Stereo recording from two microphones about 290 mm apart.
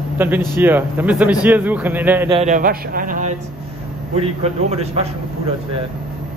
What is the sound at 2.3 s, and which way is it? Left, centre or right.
Speech, right.